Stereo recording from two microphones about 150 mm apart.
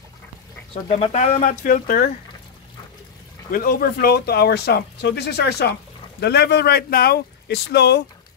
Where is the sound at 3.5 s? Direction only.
90° left.